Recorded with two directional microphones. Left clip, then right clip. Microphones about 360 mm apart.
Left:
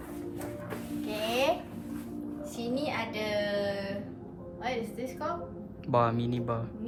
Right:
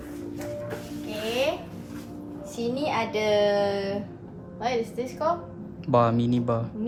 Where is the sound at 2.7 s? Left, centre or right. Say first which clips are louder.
Right 7 dB; centre.